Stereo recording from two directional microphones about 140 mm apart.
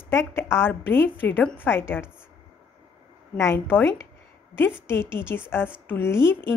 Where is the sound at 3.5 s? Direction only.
15° left (ahead or behind).